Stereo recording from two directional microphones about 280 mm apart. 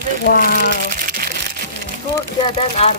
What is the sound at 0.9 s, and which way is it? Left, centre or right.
Crumpling, right.